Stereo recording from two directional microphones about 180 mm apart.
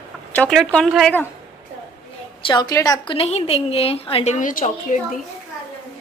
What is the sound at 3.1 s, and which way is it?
A woman's voice, 35° left (ahead or behind).